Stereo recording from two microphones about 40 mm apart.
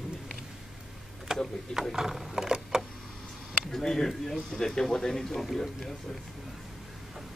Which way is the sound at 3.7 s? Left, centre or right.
Centre.